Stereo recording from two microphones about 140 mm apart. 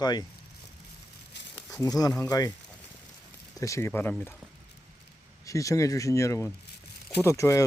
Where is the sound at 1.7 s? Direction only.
25° left (ahead or behind).